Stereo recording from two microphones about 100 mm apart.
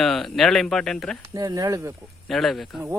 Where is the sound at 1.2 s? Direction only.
35° right (ahead or behind).